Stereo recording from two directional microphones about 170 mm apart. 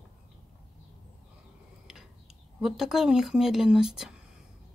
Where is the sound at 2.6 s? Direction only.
Centre (ahead or behind).